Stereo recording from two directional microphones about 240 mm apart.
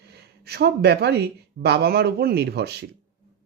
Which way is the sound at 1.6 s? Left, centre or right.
Right.